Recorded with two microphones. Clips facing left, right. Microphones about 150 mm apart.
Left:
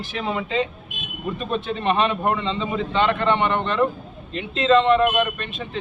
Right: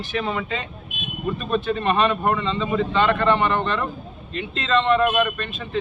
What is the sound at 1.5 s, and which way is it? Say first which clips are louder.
A man's voice: right 1 dB; 25° left (ahead or behind).